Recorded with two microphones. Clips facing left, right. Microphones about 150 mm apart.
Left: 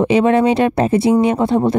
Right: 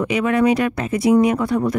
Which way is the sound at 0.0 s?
30° left (ahead or behind).